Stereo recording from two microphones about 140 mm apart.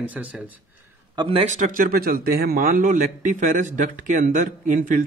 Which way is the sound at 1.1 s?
40° right (ahead or behind).